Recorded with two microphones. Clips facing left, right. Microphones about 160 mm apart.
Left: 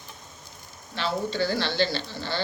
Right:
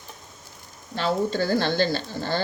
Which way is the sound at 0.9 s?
45° right (ahead or behind).